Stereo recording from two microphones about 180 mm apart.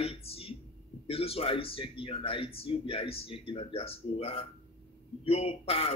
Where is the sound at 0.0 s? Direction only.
35° left (ahead or behind).